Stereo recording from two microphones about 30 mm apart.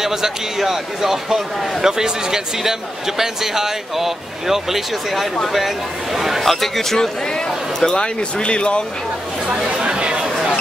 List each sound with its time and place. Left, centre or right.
0.0 s a man's voice: centre
6.1 s a man's voice: centre
6.5 s a man's voice: centre
7.8 s speech: left
9.7 s chatter: right